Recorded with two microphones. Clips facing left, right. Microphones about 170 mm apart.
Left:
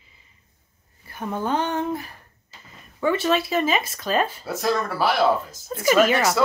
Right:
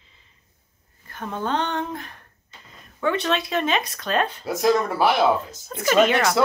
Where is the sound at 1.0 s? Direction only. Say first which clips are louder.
Left 1 dB; 10° left (ahead or behind).